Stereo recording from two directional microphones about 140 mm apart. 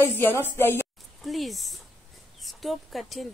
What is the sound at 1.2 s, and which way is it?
A woman's voice, centre (ahead or behind).